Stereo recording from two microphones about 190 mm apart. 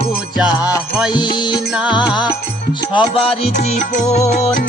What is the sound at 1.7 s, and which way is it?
Music, 5° right (ahead or behind).